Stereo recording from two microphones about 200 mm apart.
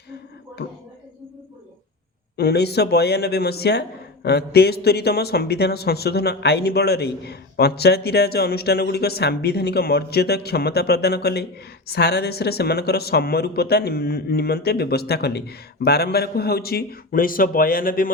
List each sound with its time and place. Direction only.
2.3 s speech: 55° left (ahead or behind)